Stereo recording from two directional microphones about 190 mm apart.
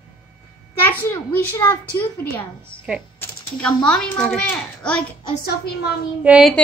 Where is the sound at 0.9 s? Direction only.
10° left (ahead or behind).